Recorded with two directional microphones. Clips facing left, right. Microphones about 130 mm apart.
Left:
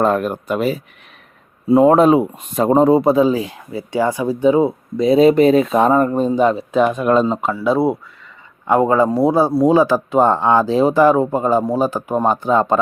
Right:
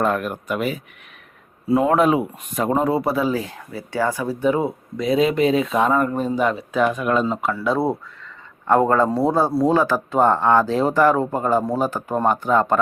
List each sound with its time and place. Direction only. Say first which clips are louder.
0.0 s speech: left 5 dB; 30° left (ahead or behind)
7.5 s speech: left 5 dB; 10° left (ahead or behind)